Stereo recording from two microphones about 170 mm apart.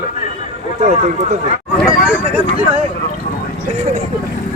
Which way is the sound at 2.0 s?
10° right (ahead or behind).